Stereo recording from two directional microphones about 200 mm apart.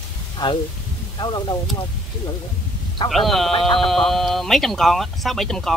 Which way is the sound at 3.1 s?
Centre (ahead or behind).